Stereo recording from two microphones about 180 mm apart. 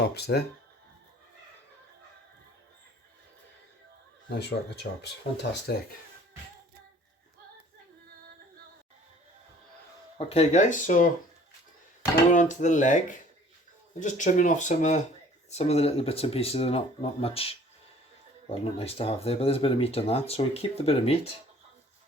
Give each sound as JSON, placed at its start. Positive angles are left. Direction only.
{"t": 0.1, "sound": "speech", "side_deg": 65}
{"t": 4.3, "sound": "speech", "side_deg": 65}
{"t": 10.2, "sound": "speech", "side_deg": 35}
{"t": 12.3, "sound": "speech", "side_deg": 45}